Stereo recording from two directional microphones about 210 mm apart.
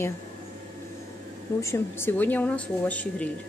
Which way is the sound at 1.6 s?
10° left (ahead or behind).